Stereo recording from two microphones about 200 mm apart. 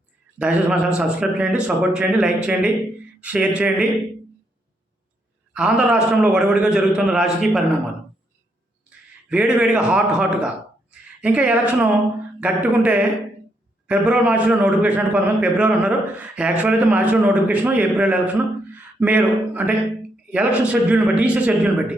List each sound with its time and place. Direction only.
0.3 s a man's voice: 5° right (ahead or behind)
5.5 s speech: 5° right (ahead or behind)
8.9 s a man's voice: 5° right (ahead or behind)
18.7 s a sound: 10° right (ahead or behind)
20.3 s a man's voice: 5° right (ahead or behind)